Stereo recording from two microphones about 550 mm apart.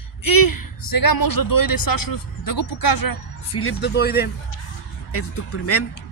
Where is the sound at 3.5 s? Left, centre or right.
Left.